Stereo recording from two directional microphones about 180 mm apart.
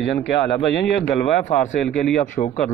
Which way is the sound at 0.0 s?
70° left (ahead or behind).